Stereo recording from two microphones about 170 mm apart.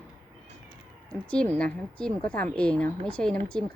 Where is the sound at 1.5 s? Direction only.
5° left (ahead or behind).